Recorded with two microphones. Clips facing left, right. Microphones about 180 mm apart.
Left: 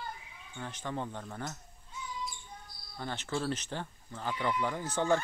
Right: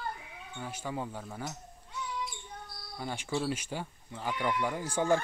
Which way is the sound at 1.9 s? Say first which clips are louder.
Right 3 dB; 75° right (ahead or behind).